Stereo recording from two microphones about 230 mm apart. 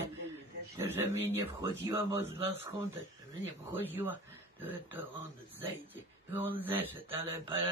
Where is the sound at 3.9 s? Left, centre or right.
Centre.